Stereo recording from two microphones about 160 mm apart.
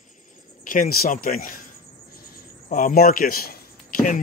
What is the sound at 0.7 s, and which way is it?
Speech, 65° left (ahead or behind).